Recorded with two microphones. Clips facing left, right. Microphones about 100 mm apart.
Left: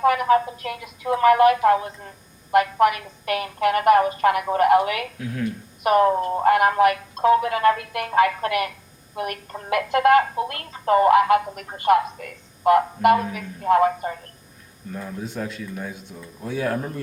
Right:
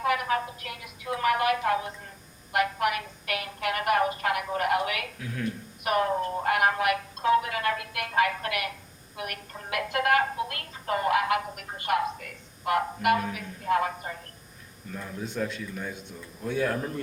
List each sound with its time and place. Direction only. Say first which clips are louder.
0.0 s speech: left 9 dB; 35° left (ahead or behind)
14.9 s speech: left 2 dB; 5° left (ahead or behind)